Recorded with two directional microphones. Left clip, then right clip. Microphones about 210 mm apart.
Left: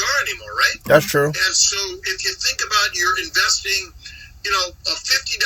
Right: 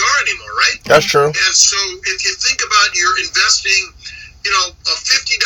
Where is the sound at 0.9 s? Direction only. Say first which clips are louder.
Right 5 dB; 20° left (ahead or behind).